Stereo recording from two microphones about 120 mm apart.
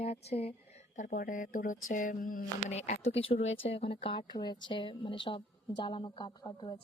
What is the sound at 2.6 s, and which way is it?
Speech, 70° left (ahead or behind).